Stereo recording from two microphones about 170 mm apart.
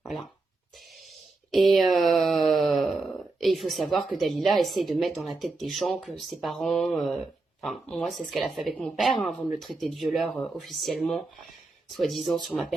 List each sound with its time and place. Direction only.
1.5 s speech: centre (ahead or behind)